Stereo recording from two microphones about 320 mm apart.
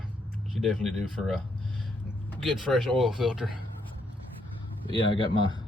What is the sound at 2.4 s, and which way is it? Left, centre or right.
Speech, centre.